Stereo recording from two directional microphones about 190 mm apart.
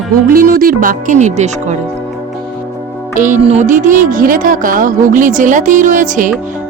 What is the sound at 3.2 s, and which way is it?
Speech, 40° right (ahead or behind).